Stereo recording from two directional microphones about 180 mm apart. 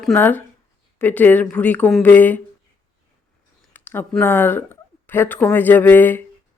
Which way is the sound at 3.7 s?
10° left (ahead or behind).